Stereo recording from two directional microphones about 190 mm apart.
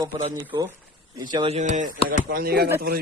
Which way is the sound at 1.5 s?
40° right (ahead or behind).